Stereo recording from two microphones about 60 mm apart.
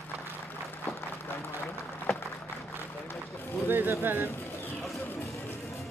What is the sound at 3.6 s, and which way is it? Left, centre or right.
Speech, right.